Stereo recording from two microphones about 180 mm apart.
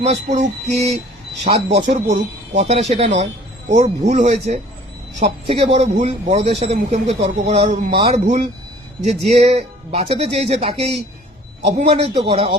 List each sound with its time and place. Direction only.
0.0 s a man's voice: 40° right (ahead or behind)